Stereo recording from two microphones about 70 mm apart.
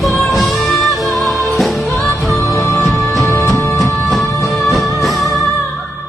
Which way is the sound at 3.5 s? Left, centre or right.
Left.